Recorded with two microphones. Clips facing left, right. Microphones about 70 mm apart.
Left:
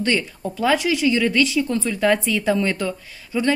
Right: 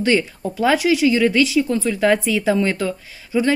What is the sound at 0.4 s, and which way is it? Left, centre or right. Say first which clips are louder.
A woman's voice: right 1 dB; centre.